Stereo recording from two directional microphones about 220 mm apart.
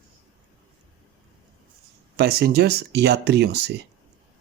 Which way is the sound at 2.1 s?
45° right (ahead or behind).